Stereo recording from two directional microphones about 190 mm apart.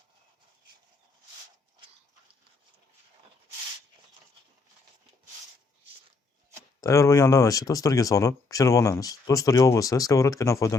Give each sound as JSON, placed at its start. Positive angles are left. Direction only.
{"t": 6.8, "sound": "speech", "side_deg": 15}